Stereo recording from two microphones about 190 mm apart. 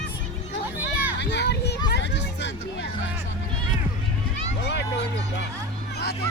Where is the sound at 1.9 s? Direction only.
65° left (ahead or behind).